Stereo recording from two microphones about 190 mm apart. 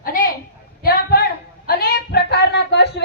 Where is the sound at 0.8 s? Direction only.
50° left (ahead or behind).